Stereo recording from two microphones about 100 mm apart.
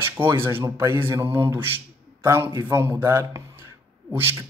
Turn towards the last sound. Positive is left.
turn(degrees=-20)  # may be behind; listen again after turning